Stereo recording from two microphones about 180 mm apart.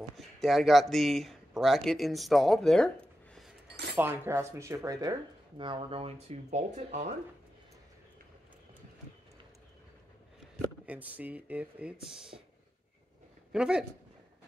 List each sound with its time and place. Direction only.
0.4 s speech: centre (ahead or behind)
3.9 s speech: 10° right (ahead or behind); by 7.2 s 40° right (ahead or behind)
10.9 s speech: 10° right (ahead or behind)
13.5 s speech: 5° right (ahead or behind)